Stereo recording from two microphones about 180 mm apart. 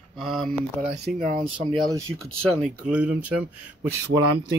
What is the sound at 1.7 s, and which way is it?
Speech, 20° right (ahead or behind).